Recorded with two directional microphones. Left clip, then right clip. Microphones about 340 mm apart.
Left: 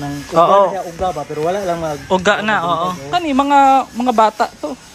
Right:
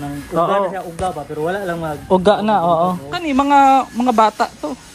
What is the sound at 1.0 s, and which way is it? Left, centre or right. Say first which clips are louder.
Speech: left 1 dB; left.